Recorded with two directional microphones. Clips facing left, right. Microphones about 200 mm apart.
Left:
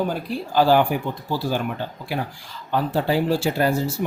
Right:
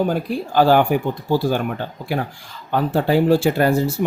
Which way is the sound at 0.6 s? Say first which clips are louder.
Right 2 dB; 55° right (ahead or behind).